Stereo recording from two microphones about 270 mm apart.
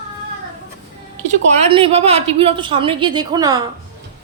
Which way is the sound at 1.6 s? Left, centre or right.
Right.